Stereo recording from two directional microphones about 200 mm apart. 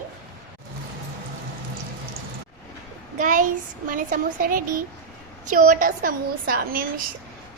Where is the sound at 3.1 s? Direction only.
40° right (ahead or behind).